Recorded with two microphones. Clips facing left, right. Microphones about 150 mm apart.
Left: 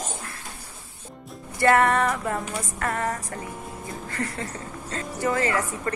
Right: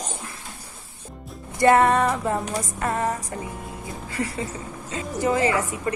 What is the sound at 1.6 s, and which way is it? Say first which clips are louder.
A woman's voice: right 3 dB; 20° right (ahead or behind).